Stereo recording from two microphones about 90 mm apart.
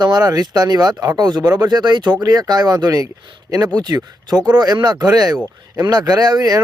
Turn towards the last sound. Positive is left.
turn(degrees=-50)  # may be behind; listen again after turning